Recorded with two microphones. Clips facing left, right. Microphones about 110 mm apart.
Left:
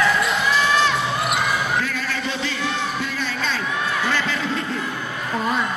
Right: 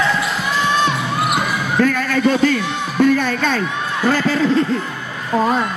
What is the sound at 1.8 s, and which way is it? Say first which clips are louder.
Speech: right 9 dB; 50° right (ahead or behind).